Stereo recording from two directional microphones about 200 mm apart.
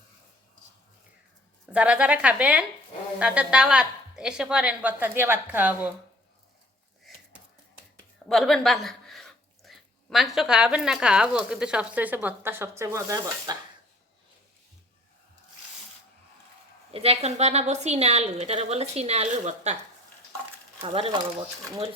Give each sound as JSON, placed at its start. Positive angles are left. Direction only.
{"t": 1.7, "sound": "a woman's voice", "side_deg": -5}
{"t": 8.3, "sound": "speech", "side_deg": 0}
{"t": 16.9, "sound": "a woman's voice", "side_deg": -30}
{"t": 20.8, "sound": "speech", "side_deg": -25}